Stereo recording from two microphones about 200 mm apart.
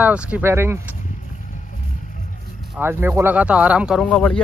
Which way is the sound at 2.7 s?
10° right (ahead or behind).